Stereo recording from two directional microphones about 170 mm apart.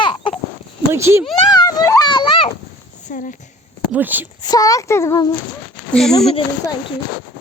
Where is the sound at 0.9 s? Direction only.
15° right (ahead or behind).